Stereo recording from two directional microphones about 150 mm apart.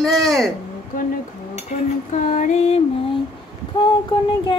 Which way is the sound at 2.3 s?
50° left (ahead or behind).